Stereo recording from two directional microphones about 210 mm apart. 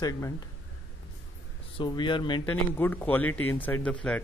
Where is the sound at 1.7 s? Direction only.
20° left (ahead or behind).